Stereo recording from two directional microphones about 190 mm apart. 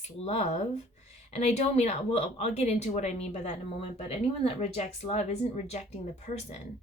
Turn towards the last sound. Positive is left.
turn(degrees=35)  # may be behind; listen again after turning